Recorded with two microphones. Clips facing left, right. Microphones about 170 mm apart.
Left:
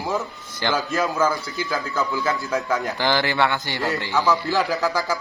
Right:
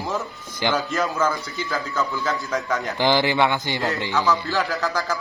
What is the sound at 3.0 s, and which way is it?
Speech, 15° right (ahead or behind).